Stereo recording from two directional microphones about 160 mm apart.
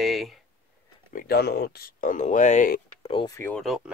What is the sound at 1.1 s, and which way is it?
Speech, 80° left.